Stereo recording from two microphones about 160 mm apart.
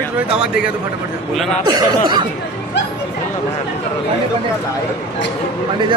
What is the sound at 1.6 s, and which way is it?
Speech, 25° right (ahead or behind).